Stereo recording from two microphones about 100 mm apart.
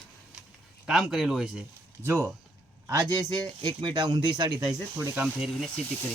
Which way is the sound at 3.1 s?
45° right (ahead or behind).